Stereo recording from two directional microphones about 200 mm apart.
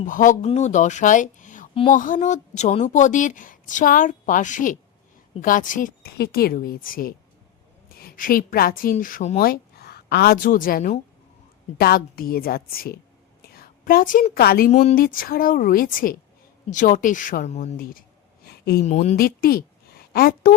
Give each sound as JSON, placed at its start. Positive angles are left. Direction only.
{"t": 0.0, "sound": "a woman's voice", "side_deg": 40}
{"t": 9.4, "sound": "a woman's voice", "side_deg": 50}
{"t": 14.7, "sound": "speech", "side_deg": 35}
{"t": 15.0, "sound": "a woman's voice", "side_deg": 45}
{"t": 17.7, "sound": "a woman's voice", "side_deg": 45}
{"t": 18.4, "sound": "a sound", "side_deg": 50}
{"t": 18.9, "sound": "speech", "side_deg": 35}
{"t": 19.1, "sound": "a woman's voice", "side_deg": 50}